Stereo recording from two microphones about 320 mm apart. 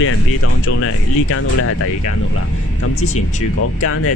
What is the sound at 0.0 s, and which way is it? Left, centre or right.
Speech, left.